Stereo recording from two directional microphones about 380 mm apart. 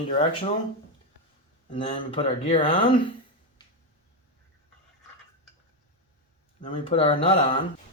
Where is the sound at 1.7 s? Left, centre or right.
Centre.